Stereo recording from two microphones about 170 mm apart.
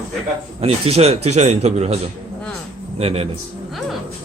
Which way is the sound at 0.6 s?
35° right (ahead or behind).